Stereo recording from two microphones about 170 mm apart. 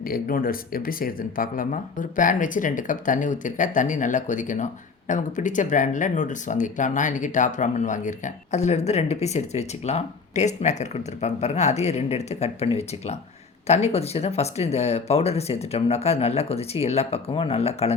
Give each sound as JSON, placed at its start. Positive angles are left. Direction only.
{"t": 0.1, "sound": "speech", "side_deg": 60}